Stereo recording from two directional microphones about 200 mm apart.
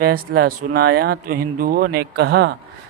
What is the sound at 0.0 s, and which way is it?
Speech, 50° right (ahead or behind).